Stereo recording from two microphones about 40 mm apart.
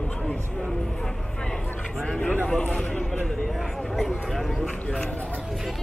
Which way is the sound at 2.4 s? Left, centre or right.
Left.